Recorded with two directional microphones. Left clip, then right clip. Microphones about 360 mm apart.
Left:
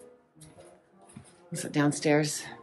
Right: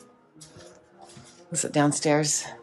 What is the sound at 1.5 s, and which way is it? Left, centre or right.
Speech, centre.